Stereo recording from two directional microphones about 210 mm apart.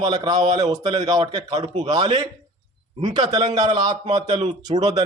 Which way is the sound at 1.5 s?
30° right (ahead or behind).